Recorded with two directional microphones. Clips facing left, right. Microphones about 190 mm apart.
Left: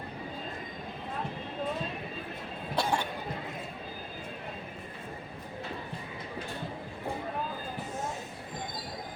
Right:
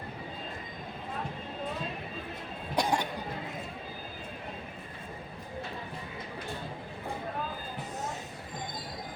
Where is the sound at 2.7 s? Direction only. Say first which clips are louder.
Right 1 dB; 15° right (ahead or behind).